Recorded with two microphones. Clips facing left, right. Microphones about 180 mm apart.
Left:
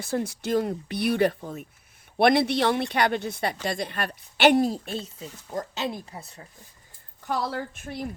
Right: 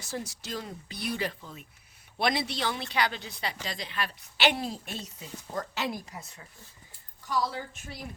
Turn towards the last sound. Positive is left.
turn(degrees=55)  # may be behind; listen again after turning